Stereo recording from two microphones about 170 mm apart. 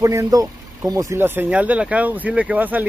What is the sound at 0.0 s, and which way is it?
Speech, 20° right (ahead or behind).